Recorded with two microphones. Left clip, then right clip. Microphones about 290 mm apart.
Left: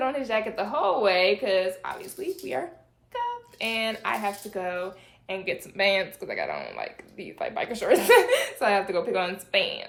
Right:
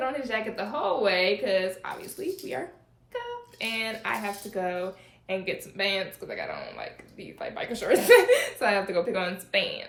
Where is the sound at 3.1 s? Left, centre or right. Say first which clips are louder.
Left 6 dB; centre.